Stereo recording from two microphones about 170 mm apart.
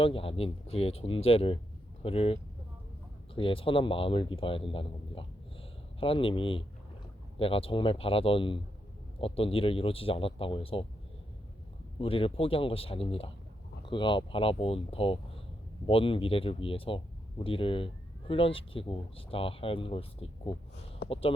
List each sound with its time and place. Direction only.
0.0 s speech: 35° left (ahead or behind)
11.9 s speech: 30° left (ahead or behind)